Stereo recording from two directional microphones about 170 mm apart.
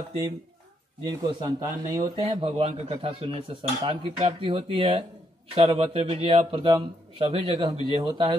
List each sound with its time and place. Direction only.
1.0 s speech: 25° right (ahead or behind)
2.2 s a man's voice: 30° right (ahead or behind)